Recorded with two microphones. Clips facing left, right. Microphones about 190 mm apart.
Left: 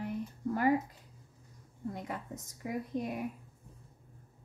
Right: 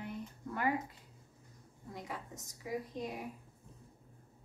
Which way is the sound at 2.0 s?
55° left (ahead or behind).